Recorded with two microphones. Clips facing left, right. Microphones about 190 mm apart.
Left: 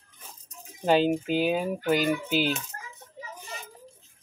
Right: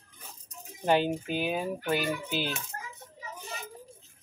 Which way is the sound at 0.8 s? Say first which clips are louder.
Left 4 dB; 15° left (ahead or behind).